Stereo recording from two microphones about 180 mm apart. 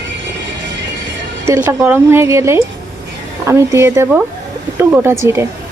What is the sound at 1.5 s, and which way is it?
Speech, 15° right (ahead or behind).